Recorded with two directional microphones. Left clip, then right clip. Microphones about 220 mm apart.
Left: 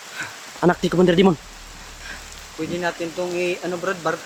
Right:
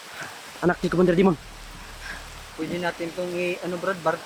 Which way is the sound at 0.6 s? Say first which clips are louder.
Left 4 dB; 20° left (ahead or behind).